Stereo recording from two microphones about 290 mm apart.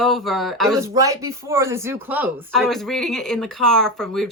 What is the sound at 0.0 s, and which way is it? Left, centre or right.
Speech, centre.